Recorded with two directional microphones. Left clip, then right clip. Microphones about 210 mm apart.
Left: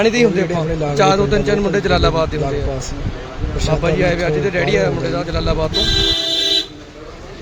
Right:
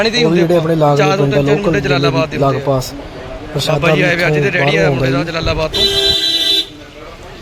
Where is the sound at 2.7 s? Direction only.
30° right (ahead or behind).